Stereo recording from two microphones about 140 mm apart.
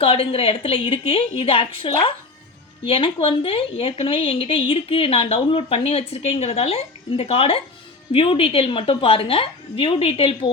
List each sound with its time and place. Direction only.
0.0 s a woman's voice: 40° left (ahead or behind)